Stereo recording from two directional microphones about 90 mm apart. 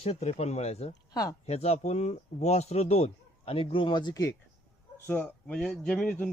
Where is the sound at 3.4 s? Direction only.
90° left; by 4.2 s 55° left (ahead or behind).